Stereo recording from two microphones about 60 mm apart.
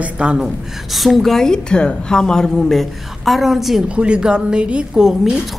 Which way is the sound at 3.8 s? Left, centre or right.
Centre.